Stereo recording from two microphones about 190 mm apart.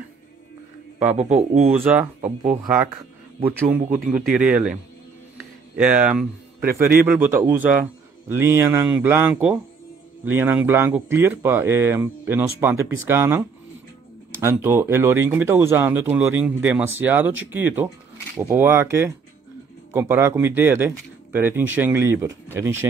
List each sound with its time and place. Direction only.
0.9 s speech: 40° right (ahead or behind)
1.7 s speech: 10° right (ahead or behind)
3.9 s speech: 10° right (ahead or behind)
5.8 s speech: 5° right (ahead or behind)